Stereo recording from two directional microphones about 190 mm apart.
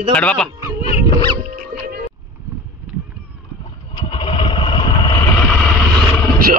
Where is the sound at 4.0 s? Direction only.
25° left (ahead or behind).